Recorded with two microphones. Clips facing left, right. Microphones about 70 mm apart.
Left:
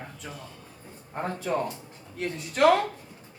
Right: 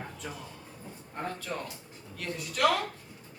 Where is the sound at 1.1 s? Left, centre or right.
Left.